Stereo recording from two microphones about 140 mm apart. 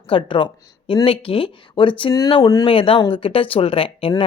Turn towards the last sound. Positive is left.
turn(degrees=40)  # may be behind; listen again after turning